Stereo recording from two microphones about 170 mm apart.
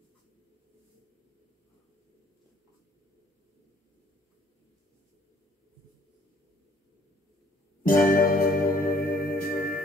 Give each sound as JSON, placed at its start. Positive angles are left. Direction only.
{"t": 7.8, "sound": "music", "side_deg": 55}